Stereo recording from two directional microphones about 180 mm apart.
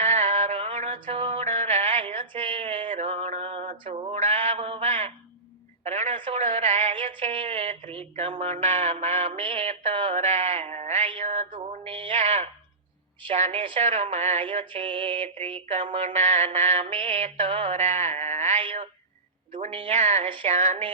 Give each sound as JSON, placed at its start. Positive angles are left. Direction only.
{"t": 0.0, "sound": "music", "side_deg": -40}
{"t": 2.9, "sound": "a sound", "side_deg": -35}
{"t": 13.2, "sound": "mantra", "side_deg": -35}